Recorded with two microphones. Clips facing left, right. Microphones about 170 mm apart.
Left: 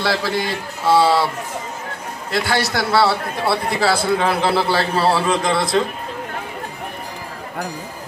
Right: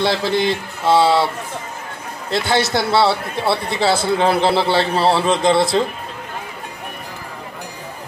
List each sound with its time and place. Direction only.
0.0 s a man's voice: 20° right (ahead or behind)
2.3 s a man's voice: 25° right (ahead or behind)